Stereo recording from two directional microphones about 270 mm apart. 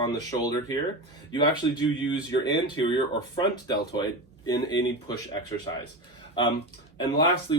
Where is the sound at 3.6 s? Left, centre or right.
Centre.